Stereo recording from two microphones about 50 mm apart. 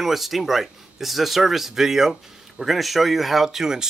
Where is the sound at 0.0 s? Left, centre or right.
Centre.